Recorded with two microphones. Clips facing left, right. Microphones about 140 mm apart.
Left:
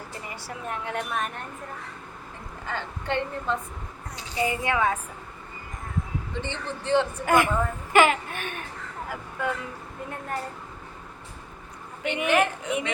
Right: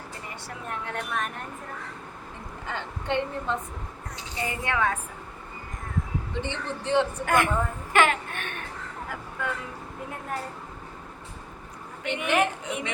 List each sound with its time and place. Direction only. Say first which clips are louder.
0.4 s a woman's voice: left 2 dB; 5° left (ahead or behind)
2.6 s a woman's voice: even; 20° right (ahead or behind)
4.4 s a woman's voice: left 3 dB; 10° left (ahead or behind)
6.4 s a woman's voice: right 1 dB; 15° right (ahead or behind)
7.3 s a woman's voice: left 2 dB; 5° left (ahead or behind)
12.0 s a woman's voice: left 2 dB; 5° left (ahead or behind)